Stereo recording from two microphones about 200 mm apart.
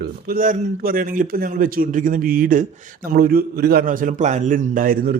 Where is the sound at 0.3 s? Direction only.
40° right (ahead or behind).